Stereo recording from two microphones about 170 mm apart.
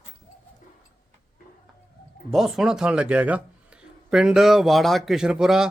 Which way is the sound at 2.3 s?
Centre (ahead or behind).